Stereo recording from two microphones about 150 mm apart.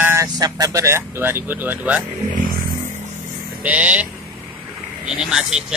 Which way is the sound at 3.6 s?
10° right (ahead or behind).